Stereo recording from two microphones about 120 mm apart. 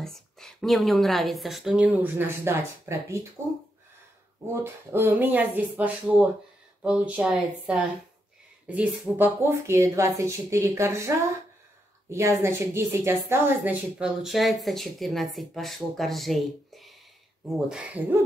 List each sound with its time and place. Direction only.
0.0 s a woman's voice: 5° left (ahead or behind)
2.0 s speech: 15° right (ahead or behind)
4.5 s speech: 20° right (ahead or behind)
14.0 s speech: centre (ahead or behind)